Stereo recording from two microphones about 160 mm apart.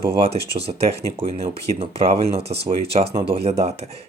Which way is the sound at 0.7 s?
40° right (ahead or behind).